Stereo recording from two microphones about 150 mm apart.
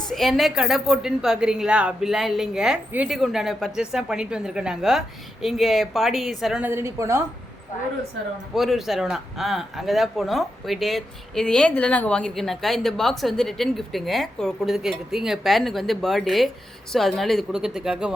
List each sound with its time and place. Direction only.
0.1 s speech: centre (ahead or behind)
6.7 s a woman's voice: 15° right (ahead or behind)
8.5 s speech: centre (ahead or behind)